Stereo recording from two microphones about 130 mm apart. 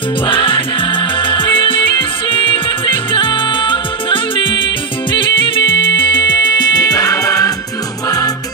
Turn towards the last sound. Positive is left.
turn(degrees=25)  # may be behind; listen again after turning